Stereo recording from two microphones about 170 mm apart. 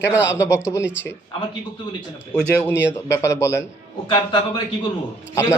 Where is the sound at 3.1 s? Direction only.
15° left (ahead or behind).